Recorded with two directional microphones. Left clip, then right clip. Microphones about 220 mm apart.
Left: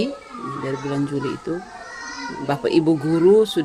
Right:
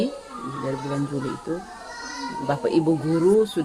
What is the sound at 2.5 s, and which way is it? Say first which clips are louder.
Speech: left 3 dB; 45° left (ahead or behind).